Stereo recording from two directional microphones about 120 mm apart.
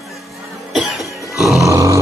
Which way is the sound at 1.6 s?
25° right (ahead or behind).